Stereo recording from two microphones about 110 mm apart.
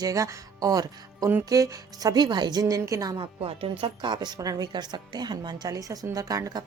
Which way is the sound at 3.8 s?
45° right (ahead or behind).